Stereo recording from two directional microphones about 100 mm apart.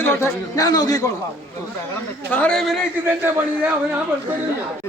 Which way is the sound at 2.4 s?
5° left (ahead or behind).